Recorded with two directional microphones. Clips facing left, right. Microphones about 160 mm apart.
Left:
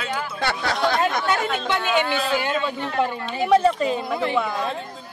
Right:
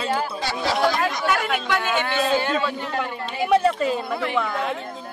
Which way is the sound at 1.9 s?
15° left (ahead or behind).